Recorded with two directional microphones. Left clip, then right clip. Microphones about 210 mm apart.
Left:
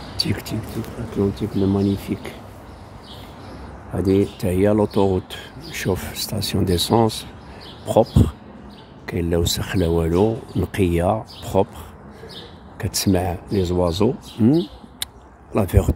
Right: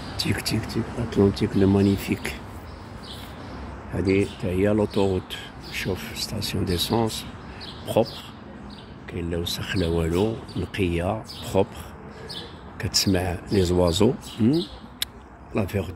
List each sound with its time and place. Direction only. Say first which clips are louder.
0.2 s speech: left 2 dB; 10° left (ahead or behind)
1.1 s speech: right 1 dB; 5° right (ahead or behind)
4.1 s speech: left 4 dB; 30° left (ahead or behind)
4.6 s speech: left 4 dB; 20° left (ahead or behind)
9.8 s speech: left 5 dB; 15° left (ahead or behind)
12.7 s speech: left 2 dB; 20° left (ahead or behind)
13.5 s speech: right 1 dB; 5° left (ahead or behind)
14.4 s a sound: left 5 dB; 15° left (ahead or behind)
15.5 s speech: left 6 dB; 25° left (ahead or behind)